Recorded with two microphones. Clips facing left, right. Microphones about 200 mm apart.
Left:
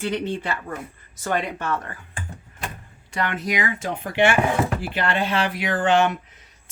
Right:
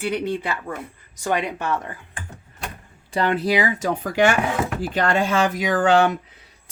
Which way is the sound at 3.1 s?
30° right (ahead or behind).